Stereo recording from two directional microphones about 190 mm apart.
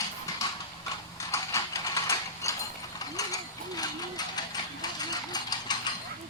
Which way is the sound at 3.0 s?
20° left (ahead or behind).